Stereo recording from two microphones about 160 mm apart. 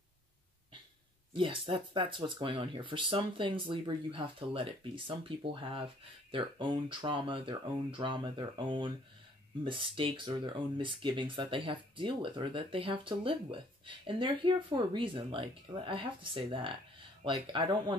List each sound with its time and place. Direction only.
1.3 s speech: 30° right (ahead or behind)